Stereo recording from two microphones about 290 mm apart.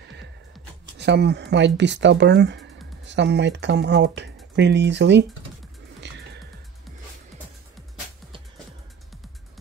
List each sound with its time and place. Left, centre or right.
0.9 s speech: right